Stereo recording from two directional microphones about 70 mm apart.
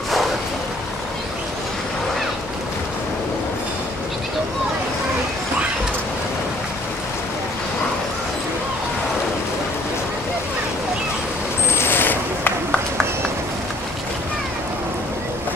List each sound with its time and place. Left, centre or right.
11.7 s coin: left